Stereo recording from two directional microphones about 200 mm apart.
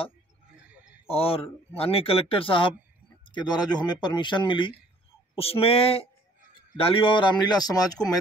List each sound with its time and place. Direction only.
1.0 s speech: 30° left (ahead or behind)